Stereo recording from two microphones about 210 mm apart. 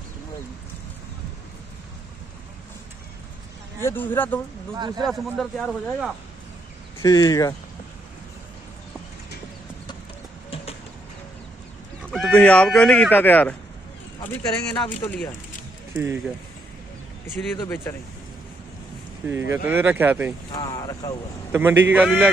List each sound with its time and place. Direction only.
3.8 s speech: 10° left (ahead or behind)
4.7 s speech: 20° right (ahead or behind)
5.0 s speech: centre (ahead or behind)
7.0 s speech: 15° left (ahead or behind)
10.5 s vehicle: 25° left (ahead or behind)
12.1 s speech: 5° left (ahead or behind)
15.0 s speech: 5° left (ahead or behind)
15.9 s speech: 10° right (ahead or behind)
17.4 s speech: 10° left (ahead or behind)
19.2 s speech: 10° right (ahead or behind)
20.5 s speech: 15° left (ahead or behind)
21.5 s speech: 10° right (ahead or behind)